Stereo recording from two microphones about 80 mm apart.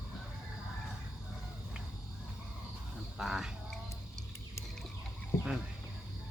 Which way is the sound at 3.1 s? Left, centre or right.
Centre.